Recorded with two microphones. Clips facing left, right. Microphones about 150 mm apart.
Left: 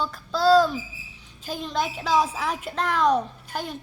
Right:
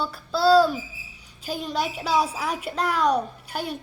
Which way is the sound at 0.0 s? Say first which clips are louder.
Even; 10° right (ahead or behind).